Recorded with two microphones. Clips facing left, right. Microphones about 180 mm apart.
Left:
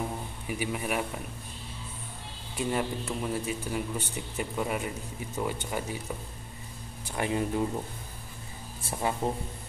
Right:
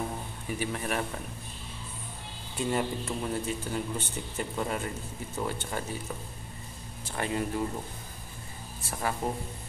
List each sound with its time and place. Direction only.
0.5 s speech: 10° left (ahead or behind)
2.5 s speech: 5° left (ahead or behind)
7.1 s speech: 15° left (ahead or behind)
8.9 s speech: 20° left (ahead or behind)